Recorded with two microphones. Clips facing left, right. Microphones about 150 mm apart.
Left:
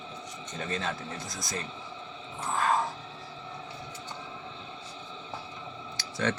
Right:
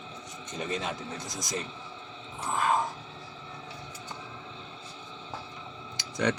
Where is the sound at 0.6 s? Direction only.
15° right (ahead or behind).